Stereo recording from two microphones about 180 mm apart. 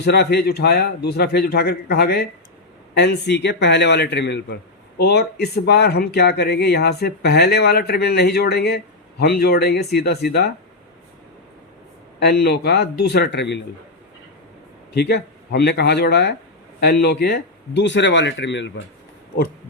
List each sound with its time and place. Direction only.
0.0 s speech: 65° left (ahead or behind)
2.9 s speech: 70° left (ahead or behind)
12.2 s speech: 60° left (ahead or behind)
14.9 s speech: 65° left (ahead or behind); by 18.7 s 85° left